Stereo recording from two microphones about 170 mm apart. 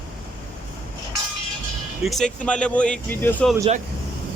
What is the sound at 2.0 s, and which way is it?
Speech, centre (ahead or behind).